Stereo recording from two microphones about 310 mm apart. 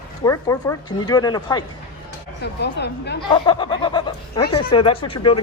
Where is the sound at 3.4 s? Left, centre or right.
Centre.